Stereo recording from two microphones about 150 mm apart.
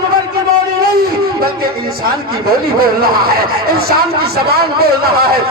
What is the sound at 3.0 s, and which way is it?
A man's voice, 90° right.